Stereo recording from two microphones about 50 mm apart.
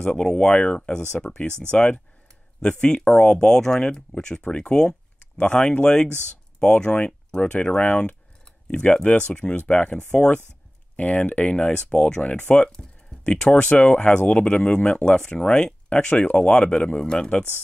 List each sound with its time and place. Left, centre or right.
0.0 s speech: centre